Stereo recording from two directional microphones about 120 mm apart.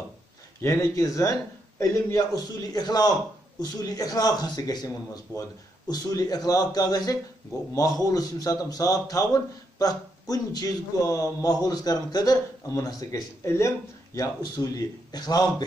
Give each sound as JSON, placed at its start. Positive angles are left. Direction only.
{"t": 0.6, "sound": "speech", "side_deg": 25}